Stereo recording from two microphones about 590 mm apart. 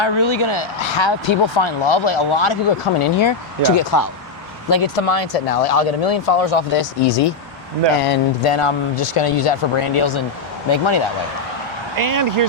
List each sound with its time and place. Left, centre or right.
0.0 s speech: left
3.8 s speech: left
4.7 s speech: left
11.9 s speech: right